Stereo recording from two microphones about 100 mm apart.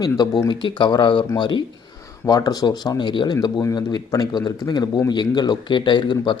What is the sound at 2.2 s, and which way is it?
Speech, 40° left (ahead or behind).